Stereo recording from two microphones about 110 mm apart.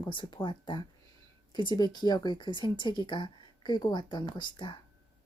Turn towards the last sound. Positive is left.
turn(degrees=45)  # may be behind; listen again after turning